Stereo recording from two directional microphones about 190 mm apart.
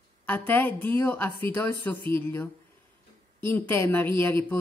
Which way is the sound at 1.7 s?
25° right (ahead or behind).